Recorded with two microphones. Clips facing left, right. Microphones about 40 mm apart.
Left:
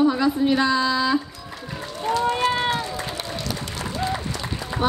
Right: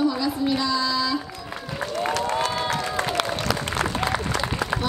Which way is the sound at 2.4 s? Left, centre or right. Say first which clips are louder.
Left 4 dB; left.